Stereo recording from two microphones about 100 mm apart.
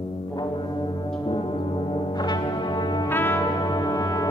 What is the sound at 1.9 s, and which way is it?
Music, 45° left (ahead or behind).